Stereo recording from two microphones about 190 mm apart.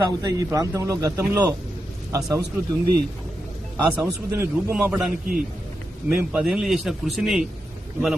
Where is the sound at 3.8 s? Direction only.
15° right (ahead or behind).